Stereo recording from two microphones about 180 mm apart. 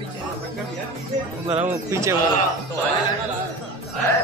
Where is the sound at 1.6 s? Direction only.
15° right (ahead or behind).